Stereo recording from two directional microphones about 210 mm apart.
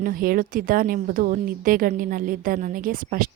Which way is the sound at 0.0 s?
40° right (ahead or behind).